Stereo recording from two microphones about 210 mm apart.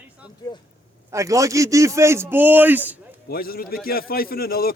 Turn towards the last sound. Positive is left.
turn(degrees=45)  # may be behind; listen again after turning